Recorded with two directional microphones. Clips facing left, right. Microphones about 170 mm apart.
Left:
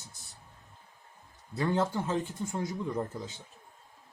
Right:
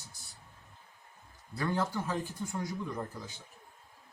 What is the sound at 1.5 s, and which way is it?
A man's voice, 25° left (ahead or behind).